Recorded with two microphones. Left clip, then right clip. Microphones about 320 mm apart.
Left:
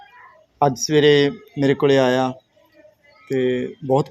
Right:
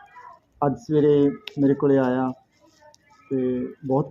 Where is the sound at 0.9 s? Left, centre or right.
Left.